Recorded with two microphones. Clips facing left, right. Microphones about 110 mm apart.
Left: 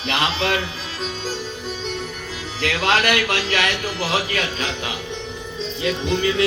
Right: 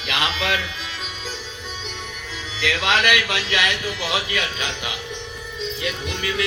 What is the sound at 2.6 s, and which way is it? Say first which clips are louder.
A man's voice: left 2 dB; 40° left (ahead or behind).